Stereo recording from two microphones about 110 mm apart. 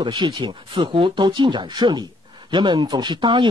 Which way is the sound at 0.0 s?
45° right (ahead or behind).